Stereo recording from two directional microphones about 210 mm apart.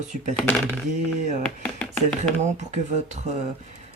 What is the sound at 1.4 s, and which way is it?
Speech, 5° left (ahead or behind).